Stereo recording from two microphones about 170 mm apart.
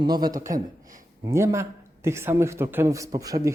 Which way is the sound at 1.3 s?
15° right (ahead or behind).